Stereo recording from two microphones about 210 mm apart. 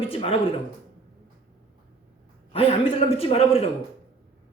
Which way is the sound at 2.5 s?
25° left (ahead or behind).